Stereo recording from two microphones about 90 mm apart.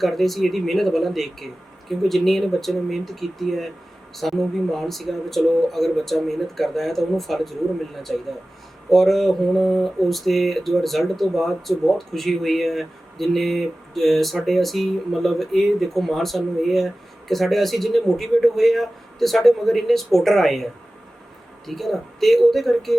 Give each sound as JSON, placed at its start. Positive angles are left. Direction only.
{"t": 0.0, "sound": "mantra", "side_deg": 0}
{"t": 21.7, "sound": "mantra", "side_deg": 0}